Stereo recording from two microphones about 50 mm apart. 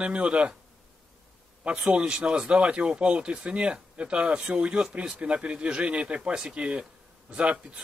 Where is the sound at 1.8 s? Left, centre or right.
Centre.